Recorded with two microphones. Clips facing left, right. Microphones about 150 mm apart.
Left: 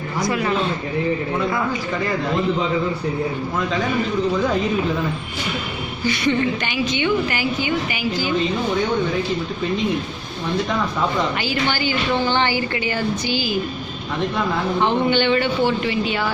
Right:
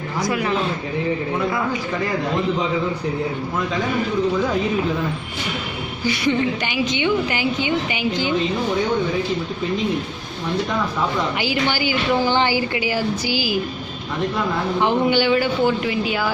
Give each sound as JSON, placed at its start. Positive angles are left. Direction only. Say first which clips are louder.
{"t": 0.2, "sound": "speech", "louder": "left 1 dB", "side_deg": -5}
{"t": 6.1, "sound": "a woman's voice", "louder": "even", "side_deg": -15}
{"t": 11.3, "sound": "a woman's voice", "louder": "right 1 dB", "side_deg": -15}
{"t": 14.8, "sound": "speech", "louder": "right 1 dB", "side_deg": -10}